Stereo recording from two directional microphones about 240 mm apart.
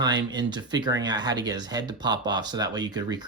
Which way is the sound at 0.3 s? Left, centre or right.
Centre.